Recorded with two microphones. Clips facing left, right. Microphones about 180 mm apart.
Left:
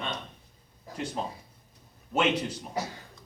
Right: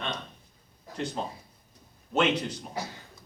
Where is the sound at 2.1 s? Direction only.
10° left (ahead or behind).